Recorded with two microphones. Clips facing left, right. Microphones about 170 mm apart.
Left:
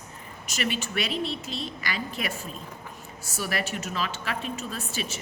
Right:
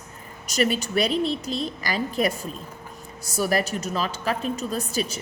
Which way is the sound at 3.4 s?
40° right (ahead or behind).